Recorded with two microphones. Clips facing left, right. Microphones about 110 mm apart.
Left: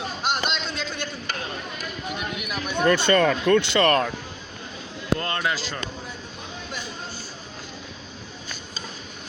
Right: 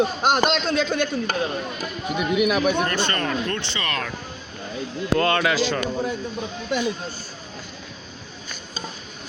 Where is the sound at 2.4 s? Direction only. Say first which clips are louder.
Right 12 dB; 85° right.